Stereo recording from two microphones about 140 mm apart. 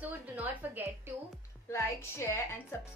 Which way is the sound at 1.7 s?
20° left (ahead or behind).